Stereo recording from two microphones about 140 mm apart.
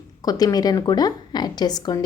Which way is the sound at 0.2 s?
25° left (ahead or behind).